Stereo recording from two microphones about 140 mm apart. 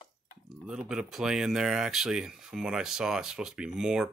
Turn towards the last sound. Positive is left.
turn(degrees=-5)  # may be behind; listen again after turning